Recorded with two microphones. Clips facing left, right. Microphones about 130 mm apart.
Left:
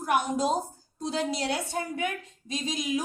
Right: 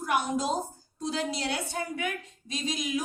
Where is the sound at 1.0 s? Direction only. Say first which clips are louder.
Left 2 dB; 35° left (ahead or behind).